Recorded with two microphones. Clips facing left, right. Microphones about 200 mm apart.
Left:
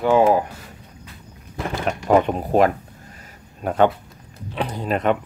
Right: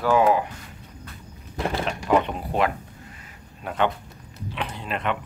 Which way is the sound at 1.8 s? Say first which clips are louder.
Left 6 dB; 45° left (ahead or behind).